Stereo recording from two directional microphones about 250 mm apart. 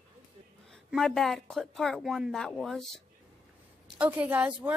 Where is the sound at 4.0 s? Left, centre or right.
Centre.